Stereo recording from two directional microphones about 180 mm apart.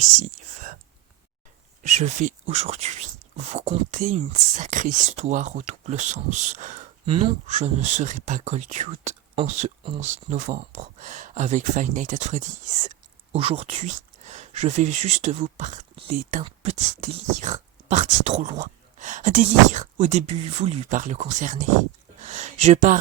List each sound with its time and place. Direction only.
0.3 s whispering: 50° right (ahead or behind)
1.8 s speech: 40° right (ahead or behind)
7.0 s speech: 30° right (ahead or behind)